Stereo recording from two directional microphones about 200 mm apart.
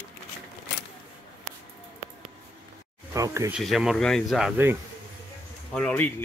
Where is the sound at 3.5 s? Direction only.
Centre (ahead or behind).